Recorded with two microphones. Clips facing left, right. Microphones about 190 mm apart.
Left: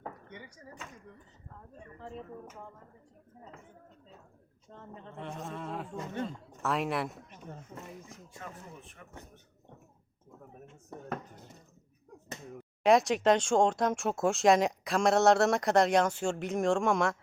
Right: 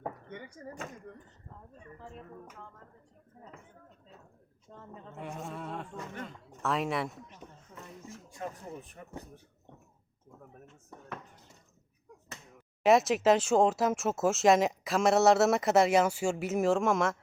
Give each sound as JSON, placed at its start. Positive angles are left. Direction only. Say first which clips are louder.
{"t": 0.3, "sound": "speech", "louder": "right 5 dB", "side_deg": -50}
{"t": 2.0, "sound": "speech", "louder": "left 5 dB", "side_deg": 0}
{"t": 4.7, "sound": "speech", "louder": "even", "side_deg": 0}
{"t": 8.9, "sound": "speech", "louder": "right 5 dB", "side_deg": -35}
{"t": 10.8, "sound": "speech", "louder": "left 6 dB", "side_deg": 45}
{"t": 12.8, "sound": "speech", "louder": "even", "side_deg": -5}